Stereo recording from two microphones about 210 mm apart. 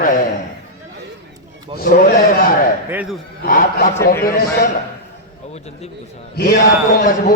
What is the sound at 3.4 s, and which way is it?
Speech, 40° left (ahead or behind).